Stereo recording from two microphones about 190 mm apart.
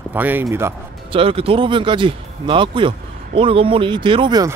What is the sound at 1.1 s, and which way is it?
Speech, 30° right (ahead or behind).